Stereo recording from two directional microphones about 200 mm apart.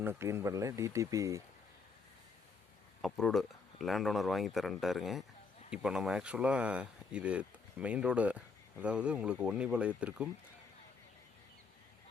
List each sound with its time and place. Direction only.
0.0 s speech: 10° right (ahead or behind)
3.0 s speech: centre (ahead or behind)